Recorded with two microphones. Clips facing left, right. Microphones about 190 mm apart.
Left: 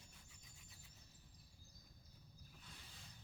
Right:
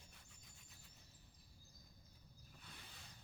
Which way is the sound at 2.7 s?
65° right (ahead or behind).